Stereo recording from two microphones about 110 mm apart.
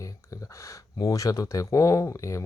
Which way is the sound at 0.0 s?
30° left (ahead or behind).